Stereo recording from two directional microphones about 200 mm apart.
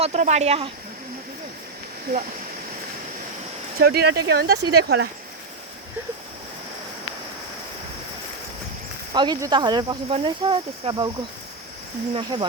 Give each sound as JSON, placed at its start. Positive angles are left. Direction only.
{"t": 0.0, "sound": "speech", "side_deg": -35}
{"t": 2.1, "sound": "speech", "side_deg": -50}
{"t": 3.8, "sound": "speech", "side_deg": -50}
{"t": 9.1, "sound": "speech", "side_deg": -20}
{"t": 12.1, "sound": "speech", "side_deg": -25}